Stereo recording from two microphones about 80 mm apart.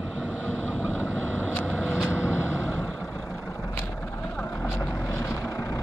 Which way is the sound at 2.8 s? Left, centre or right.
Centre.